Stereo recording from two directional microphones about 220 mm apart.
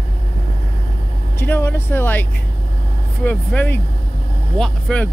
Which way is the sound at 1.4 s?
10° left (ahead or behind).